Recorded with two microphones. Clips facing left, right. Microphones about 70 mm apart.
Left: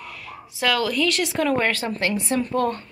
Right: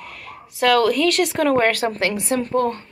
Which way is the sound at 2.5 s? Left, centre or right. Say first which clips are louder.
Right 3 dB; right.